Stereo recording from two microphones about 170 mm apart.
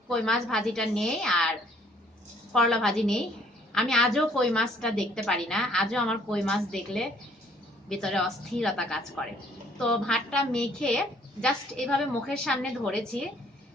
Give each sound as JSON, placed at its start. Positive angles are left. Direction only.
{"t": 0.1, "sound": "a woman's voice", "side_deg": 5}
{"t": 2.5, "sound": "a woman's voice", "side_deg": 5}